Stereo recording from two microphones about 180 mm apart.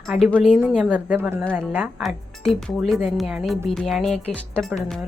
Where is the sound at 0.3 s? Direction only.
5° left (ahead or behind).